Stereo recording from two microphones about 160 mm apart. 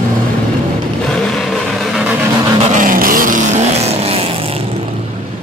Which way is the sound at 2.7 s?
60° right (ahead or behind).